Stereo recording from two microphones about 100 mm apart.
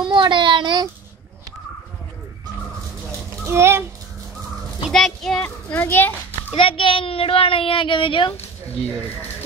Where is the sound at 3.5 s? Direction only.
25° right (ahead or behind).